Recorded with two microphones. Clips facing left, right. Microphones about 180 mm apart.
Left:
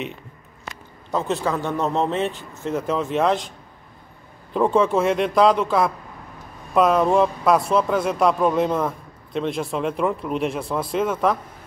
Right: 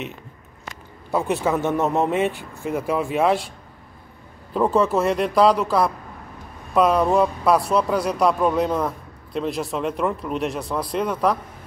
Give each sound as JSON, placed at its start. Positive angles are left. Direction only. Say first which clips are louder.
{"t": 1.1, "sound": "a man's voice", "louder": "right 2 dB", "side_deg": -15}
{"t": 4.6, "sound": "speech", "louder": "left 1 dB", "side_deg": -5}